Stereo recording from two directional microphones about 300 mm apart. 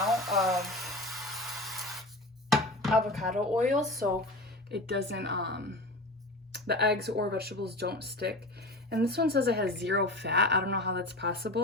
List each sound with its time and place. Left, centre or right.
0.0 s a sound: centre
2.5 s chopping: centre
4.7 s speech: right